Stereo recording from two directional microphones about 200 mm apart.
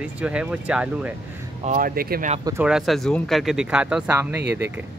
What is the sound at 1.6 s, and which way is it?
Speech, 45° right (ahead or behind).